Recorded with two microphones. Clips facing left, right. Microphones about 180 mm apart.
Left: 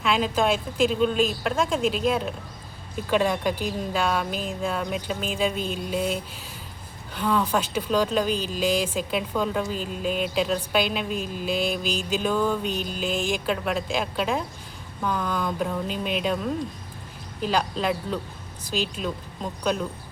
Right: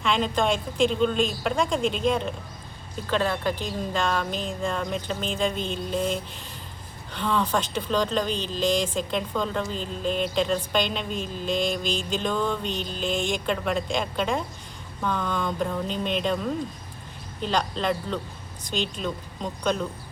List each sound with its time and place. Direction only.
0.0 s speech: 5° left (ahead or behind)